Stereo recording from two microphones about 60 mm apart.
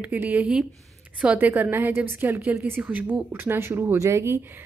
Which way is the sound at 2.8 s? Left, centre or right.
Right.